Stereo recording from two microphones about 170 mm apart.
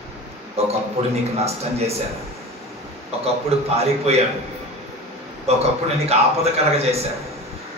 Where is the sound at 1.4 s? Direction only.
35° right (ahead or behind).